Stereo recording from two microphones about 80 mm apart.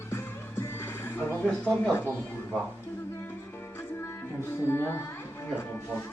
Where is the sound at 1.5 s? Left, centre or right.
Centre.